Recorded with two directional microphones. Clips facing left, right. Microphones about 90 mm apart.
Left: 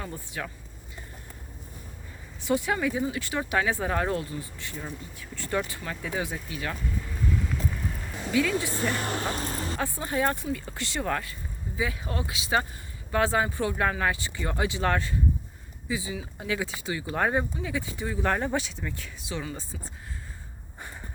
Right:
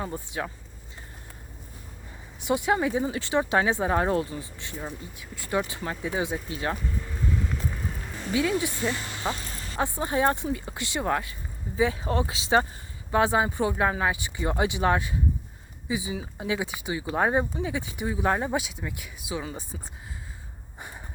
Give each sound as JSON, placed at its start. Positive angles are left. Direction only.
{"t": 0.0, "sound": "speech", "side_deg": -25}
{"t": 2.4, "sound": "speech", "side_deg": -20}
{"t": 7.0, "sound": "vehicle", "side_deg": -10}
{"t": 8.3, "sound": "speech", "side_deg": -25}
{"t": 8.9, "sound": "speech", "side_deg": 50}
{"t": 9.4, "sound": "a sound", "side_deg": 40}
{"t": 9.7, "sound": "speech", "side_deg": -25}
{"t": 19.7, "sound": "speech", "side_deg": -30}